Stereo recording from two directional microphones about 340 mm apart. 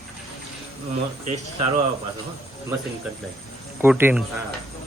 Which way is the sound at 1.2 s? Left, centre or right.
Centre.